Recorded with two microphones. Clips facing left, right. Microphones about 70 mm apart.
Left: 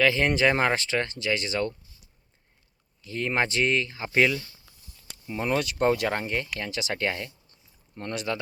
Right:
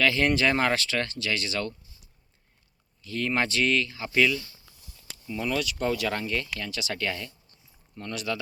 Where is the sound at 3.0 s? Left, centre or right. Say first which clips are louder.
Left 1 dB; left.